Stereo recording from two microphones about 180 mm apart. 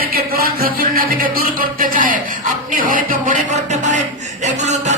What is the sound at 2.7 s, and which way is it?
Speech, 50° right (ahead or behind).